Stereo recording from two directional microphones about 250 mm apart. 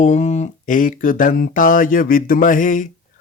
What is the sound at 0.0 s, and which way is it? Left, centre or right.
Speech, left.